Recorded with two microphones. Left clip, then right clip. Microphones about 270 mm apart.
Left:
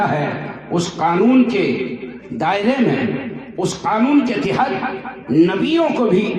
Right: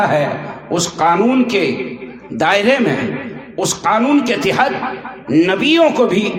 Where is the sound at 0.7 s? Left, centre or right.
Right.